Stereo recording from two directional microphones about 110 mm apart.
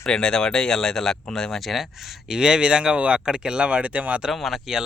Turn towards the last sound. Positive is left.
turn(degrees=-5)  # may be behind; listen again after turning